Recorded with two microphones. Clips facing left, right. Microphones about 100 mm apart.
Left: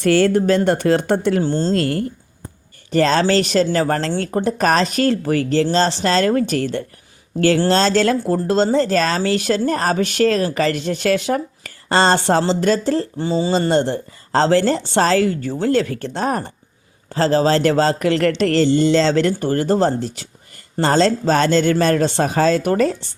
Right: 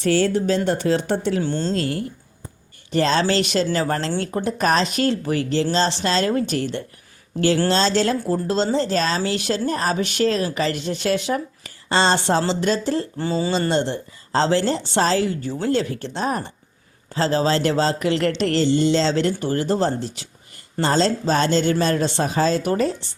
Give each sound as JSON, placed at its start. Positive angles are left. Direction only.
{"t": 0.0, "sound": "speech", "side_deg": 60}
{"t": 1.4, "sound": "speech", "side_deg": 35}
{"t": 1.7, "sound": "speech", "side_deg": 55}
{"t": 13.1, "sound": "speech", "side_deg": 20}
{"t": 13.7, "sound": "speech", "side_deg": 45}